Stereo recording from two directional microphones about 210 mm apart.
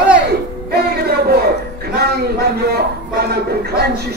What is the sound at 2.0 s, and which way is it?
A man's voice, 50° right (ahead or behind).